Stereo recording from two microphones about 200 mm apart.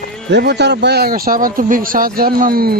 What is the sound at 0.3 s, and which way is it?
Speech, 55° right (ahead or behind).